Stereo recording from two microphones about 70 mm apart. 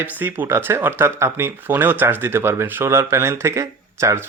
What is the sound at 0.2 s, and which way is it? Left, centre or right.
Speech, right.